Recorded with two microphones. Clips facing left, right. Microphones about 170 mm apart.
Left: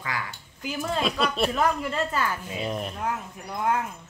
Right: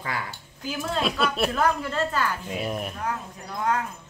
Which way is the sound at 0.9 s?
Centre (ahead or behind).